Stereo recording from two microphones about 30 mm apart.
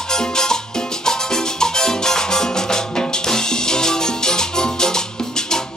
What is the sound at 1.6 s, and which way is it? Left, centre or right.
Music, left.